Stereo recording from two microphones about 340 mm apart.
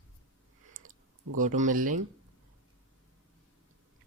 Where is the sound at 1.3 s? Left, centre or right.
Right.